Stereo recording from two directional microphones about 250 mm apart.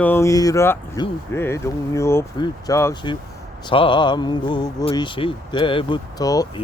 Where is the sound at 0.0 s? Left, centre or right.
Centre.